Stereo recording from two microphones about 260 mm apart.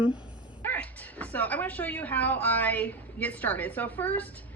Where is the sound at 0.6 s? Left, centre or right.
Centre.